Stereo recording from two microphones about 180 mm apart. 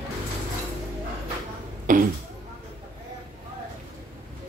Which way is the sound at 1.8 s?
50° right (ahead or behind).